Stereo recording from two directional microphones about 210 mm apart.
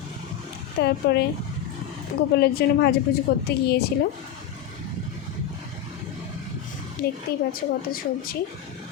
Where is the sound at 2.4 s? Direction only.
50° left (ahead or behind).